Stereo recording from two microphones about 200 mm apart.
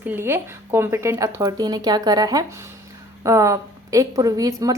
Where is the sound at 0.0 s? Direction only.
10° right (ahead or behind).